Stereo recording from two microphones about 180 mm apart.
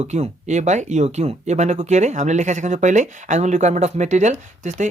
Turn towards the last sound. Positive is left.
turn(degrees=-40)  # may be behind; listen again after turning